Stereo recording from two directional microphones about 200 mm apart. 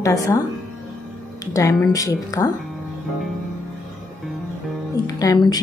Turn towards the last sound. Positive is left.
turn(degrees=20)  # may be behind; listen again after turning